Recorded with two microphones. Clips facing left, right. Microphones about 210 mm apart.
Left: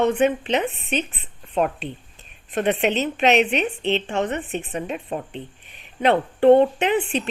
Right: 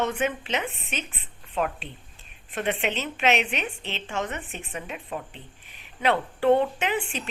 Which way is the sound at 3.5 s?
65° left (ahead or behind).